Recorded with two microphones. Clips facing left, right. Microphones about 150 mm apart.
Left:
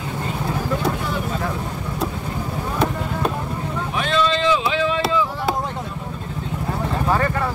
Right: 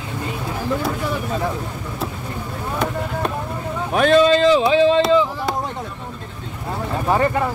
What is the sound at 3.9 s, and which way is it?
Speech, 50° right (ahead or behind).